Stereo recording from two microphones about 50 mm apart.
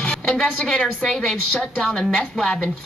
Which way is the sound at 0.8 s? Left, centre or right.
Centre.